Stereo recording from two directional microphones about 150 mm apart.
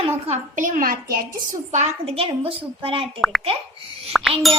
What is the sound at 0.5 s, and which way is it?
Speech, 60° right (ahead or behind).